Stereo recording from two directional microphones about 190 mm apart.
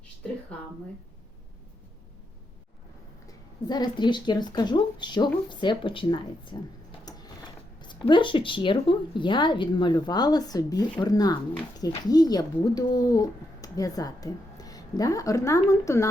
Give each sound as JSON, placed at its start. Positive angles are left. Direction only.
{"t": 3.2, "sound": "a woman's voice", "side_deg": 20}